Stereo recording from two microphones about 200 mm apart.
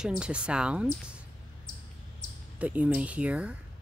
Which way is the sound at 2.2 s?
45° left (ahead or behind).